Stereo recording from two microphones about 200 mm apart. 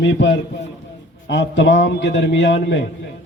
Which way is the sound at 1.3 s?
60° left (ahead or behind).